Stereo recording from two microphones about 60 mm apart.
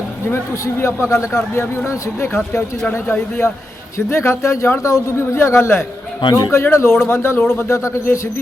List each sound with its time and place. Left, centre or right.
0.6 s speech: left
6.3 s speech: left